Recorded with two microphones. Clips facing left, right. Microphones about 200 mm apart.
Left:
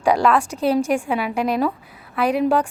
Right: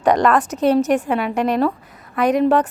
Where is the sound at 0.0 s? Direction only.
10° left (ahead or behind).